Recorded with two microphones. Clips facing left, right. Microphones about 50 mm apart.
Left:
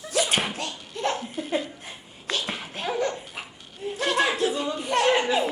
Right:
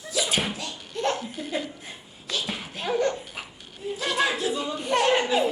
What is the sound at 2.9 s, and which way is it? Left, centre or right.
Dog, centre.